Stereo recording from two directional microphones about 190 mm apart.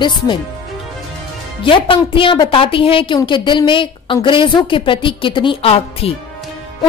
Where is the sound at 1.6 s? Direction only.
25° left (ahead or behind).